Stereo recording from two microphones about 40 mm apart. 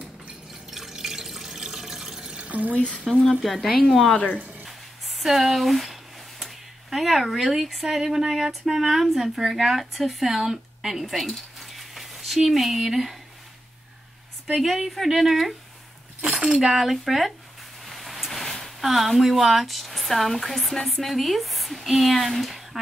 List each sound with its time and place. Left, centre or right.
0.7 s water: centre
2.3 s a sound: right
2.7 s speech: left
3.1 s speech: centre
4.6 s a sound: centre
6.4 s speech: centre
14.6 s speech: centre
16.2 s speech: centre